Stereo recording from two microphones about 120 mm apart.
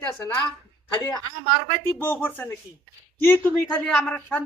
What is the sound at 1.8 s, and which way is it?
Speech, 20° left (ahead or behind).